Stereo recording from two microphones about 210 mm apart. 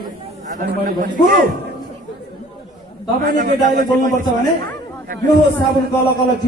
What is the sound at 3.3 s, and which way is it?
Speech, 40° right (ahead or behind).